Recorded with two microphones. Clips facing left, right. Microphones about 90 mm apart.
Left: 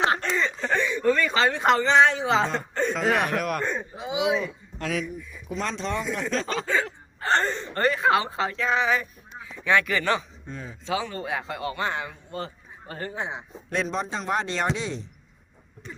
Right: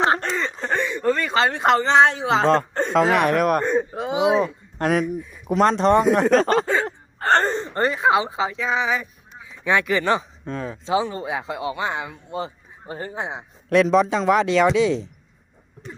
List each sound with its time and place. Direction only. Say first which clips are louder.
0.0 s a sound: right 3 dB; 30° right (ahead or behind)
1.0 s speech: right 2 dB; 35° right (ahead or behind)
2.4 s a man's voice: right 9 dB; 90° right
2.9 s speech: right 8 dB; 75° right (ahead or behind); by 3.6 s 50° right (ahead or behind)
3.6 s a man's voice: right 8 dB; 20° right (ahead or behind)
3.9 s speech: right 6 dB; 55° right (ahead or behind)
4.2 s speech: right 6 dB; 35° right (ahead or behind)
4.8 s speech: right 9 dB; 55° right (ahead or behind)
6.8 s gasp: right 6 dB; 45° right (ahead or behind)
7.5 s speech: right 2 dB; 25° right (ahead or behind); by 9.0 s 5° right (ahead or behind)
9.6 s a man's voice: right 3 dB; 20° right (ahead or behind)
10.4 s a man's voice: right 9 dB; 90° right
10.8 s a man's voice: right 5 dB; 25° right (ahead or behind)
13.7 s a man's voice: right 11 dB; 90° right